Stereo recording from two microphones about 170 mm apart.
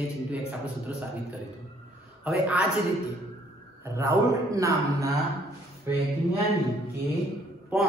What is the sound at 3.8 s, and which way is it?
A man's voice, 15° right (ahead or behind).